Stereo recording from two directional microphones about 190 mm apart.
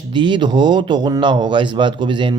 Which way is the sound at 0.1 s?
25° right (ahead or behind).